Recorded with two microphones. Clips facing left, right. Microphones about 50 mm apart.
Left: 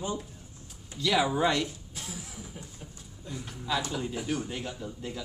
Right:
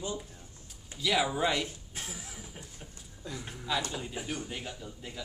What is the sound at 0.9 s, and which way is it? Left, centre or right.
Speech, centre.